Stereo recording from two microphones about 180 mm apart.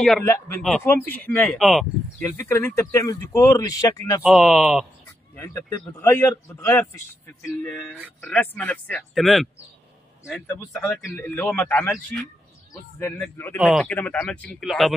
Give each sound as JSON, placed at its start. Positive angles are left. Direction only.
{"t": 0.2, "sound": "speech", "side_deg": 15}
{"t": 0.6, "sound": "a man's voice", "side_deg": 5}
{"t": 2.2, "sound": "speech", "side_deg": 15}
{"t": 4.2, "sound": "a man's voice", "side_deg": 0}
{"t": 5.3, "sound": "speech", "side_deg": 15}
{"t": 10.7, "sound": "speech", "side_deg": 0}
{"t": 13.6, "sound": "a man's voice", "side_deg": 0}